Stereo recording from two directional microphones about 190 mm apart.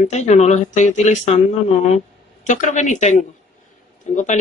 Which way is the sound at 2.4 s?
40° left (ahead or behind).